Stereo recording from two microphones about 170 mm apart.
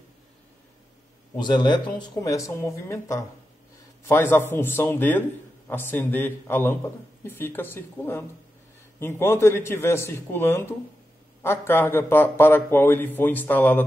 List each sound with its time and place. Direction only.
1.3 s a man's voice: 25° left (ahead or behind); by 13.8 s 10° left (ahead or behind)